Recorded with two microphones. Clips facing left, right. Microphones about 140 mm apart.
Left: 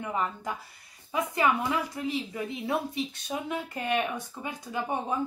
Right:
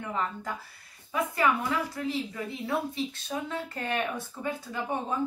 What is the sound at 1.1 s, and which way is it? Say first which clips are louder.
Speech: even; 20° left (ahead or behind).